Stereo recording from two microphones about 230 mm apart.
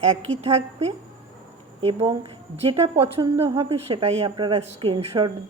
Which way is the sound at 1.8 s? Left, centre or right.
Right.